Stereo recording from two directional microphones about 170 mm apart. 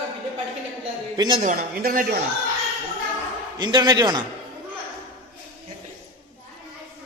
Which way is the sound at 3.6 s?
25° right (ahead or behind).